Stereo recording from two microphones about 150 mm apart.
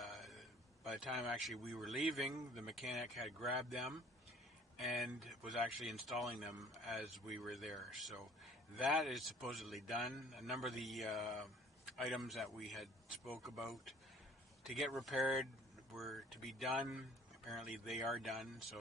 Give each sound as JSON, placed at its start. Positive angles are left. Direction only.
{"t": 0.0, "sound": "speech", "side_deg": 0}